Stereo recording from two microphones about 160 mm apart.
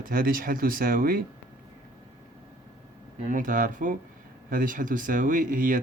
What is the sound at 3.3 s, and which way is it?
Speech, 55° right (ahead or behind).